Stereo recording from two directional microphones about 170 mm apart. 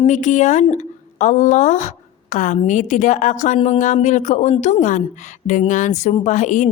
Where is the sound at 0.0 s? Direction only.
45° left (ahead or behind).